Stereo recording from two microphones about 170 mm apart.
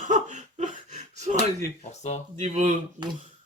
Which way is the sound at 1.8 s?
40° left (ahead or behind).